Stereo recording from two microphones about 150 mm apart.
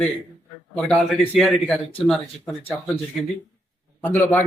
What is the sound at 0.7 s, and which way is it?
Speech, 5° left (ahead or behind).